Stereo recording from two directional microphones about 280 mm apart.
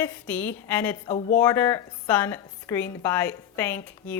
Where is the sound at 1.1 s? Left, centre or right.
Left.